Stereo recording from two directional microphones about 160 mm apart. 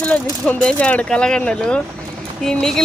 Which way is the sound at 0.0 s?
10° left (ahead or behind).